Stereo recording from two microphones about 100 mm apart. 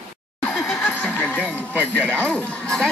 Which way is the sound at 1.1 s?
15° left (ahead or behind).